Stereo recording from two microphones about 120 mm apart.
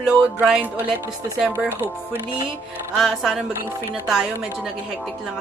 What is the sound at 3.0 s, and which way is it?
Speech, centre (ahead or behind).